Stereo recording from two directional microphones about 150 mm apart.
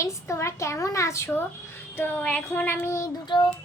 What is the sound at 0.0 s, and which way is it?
A child's voice, 20° left (ahead or behind).